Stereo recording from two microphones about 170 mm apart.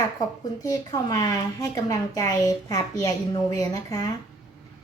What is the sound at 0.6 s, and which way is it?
A woman's voice, 20° left (ahead or behind).